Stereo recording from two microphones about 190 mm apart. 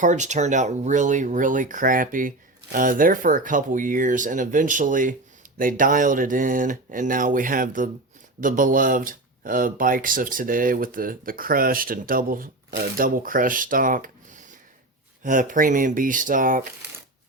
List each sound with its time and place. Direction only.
0.0 s speech: 40° right (ahead or behind)
15.2 s speech: 45° right (ahead or behind)